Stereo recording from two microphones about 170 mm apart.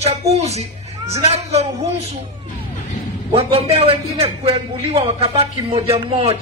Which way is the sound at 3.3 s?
35° right (ahead or behind).